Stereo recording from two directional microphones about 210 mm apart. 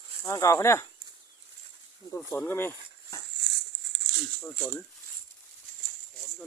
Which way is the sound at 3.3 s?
55° right (ahead or behind).